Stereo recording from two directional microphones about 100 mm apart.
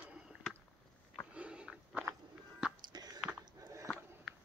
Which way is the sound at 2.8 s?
40° right (ahead or behind).